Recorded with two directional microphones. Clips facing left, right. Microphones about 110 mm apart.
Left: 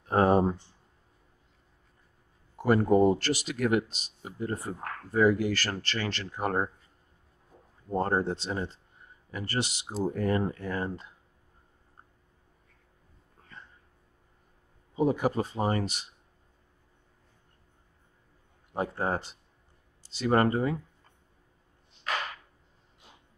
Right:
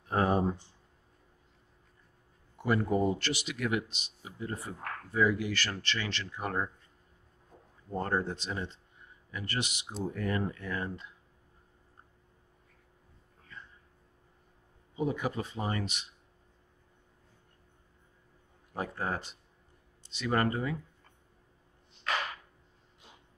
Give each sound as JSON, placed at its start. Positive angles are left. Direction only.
{"t": 0.1, "sound": "speech", "side_deg": 40}
{"t": 2.5, "sound": "speech", "side_deg": 40}
{"t": 7.9, "sound": "speech", "side_deg": 30}
{"t": 15.0, "sound": "speech", "side_deg": 35}
{"t": 18.7, "sound": "speech", "side_deg": 25}